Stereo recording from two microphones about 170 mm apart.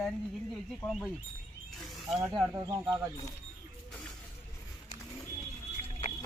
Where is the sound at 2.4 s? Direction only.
20° right (ahead or behind).